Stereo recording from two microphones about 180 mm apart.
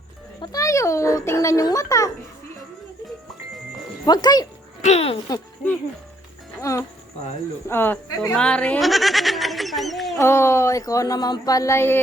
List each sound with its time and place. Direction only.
0.4 s speech: 20° left (ahead or behind)
4.0 s speech: 20° left (ahead or behind)
4.8 s speech: 35° left (ahead or behind)
6.6 s speech: 15° left (ahead or behind); by 10.2 s centre (ahead or behind)
10.2 s speech: 15° left (ahead or behind)